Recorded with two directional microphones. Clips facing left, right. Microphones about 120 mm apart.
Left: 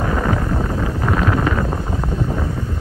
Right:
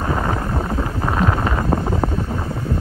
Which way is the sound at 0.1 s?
15° right (ahead or behind).